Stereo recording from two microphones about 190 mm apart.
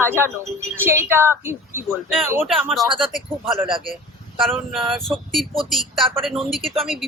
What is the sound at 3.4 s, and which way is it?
Speech, 25° right (ahead or behind).